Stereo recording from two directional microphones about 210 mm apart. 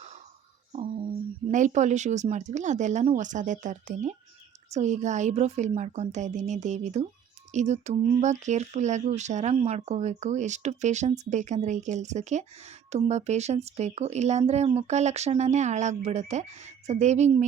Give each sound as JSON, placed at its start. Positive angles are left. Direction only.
{"t": 1.5, "sound": "speech", "side_deg": -35}